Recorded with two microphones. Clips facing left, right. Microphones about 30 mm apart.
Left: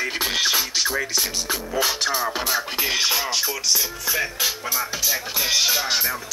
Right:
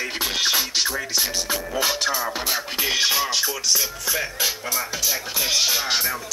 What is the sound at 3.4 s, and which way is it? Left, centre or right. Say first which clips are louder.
Speech: even; centre.